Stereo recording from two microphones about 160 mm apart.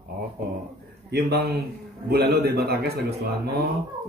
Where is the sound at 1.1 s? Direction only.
85° right.